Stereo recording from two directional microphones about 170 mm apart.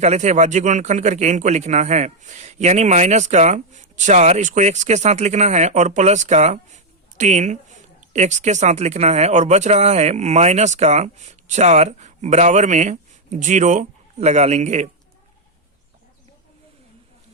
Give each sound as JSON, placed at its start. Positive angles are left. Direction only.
{"t": 0.0, "sound": "speech", "side_deg": -40}